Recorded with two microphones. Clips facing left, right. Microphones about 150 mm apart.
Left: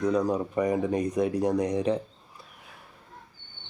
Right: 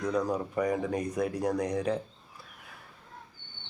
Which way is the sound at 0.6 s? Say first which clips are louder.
Left 4 dB; 15° left (ahead or behind).